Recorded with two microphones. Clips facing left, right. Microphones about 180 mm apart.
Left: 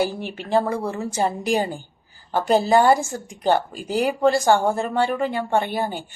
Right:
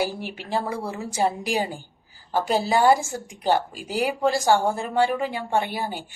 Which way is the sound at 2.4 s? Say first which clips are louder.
Left 4 dB; 50° left (ahead or behind).